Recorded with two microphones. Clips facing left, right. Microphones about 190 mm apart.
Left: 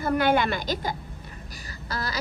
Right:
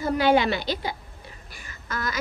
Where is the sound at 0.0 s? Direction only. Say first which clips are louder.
Right 2 dB; 55° left (ahead or behind).